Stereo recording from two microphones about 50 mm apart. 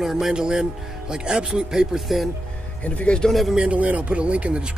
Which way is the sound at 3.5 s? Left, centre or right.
Right.